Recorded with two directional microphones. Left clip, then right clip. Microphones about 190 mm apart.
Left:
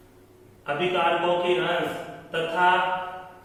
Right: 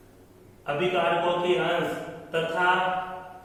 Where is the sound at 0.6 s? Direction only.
Centre (ahead or behind).